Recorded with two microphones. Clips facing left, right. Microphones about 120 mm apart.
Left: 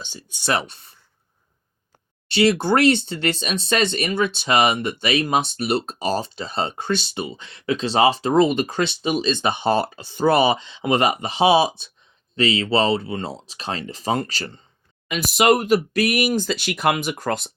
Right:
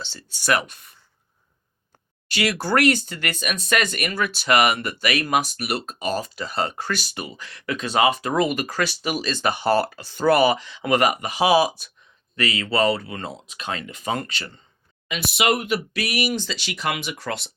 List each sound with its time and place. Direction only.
0.0 s speech: 15° left (ahead or behind)
2.3 s speech: 25° left (ahead or behind); by 17.5 s 45° left (ahead or behind)